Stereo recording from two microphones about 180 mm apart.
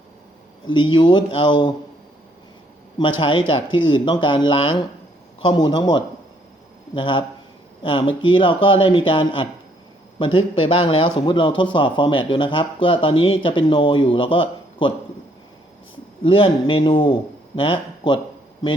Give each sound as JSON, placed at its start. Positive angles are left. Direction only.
{"t": 0.9, "sound": "speech", "side_deg": 25}
{"t": 3.2, "sound": "speech", "side_deg": 30}
{"t": 16.2, "sound": "speech", "side_deg": 30}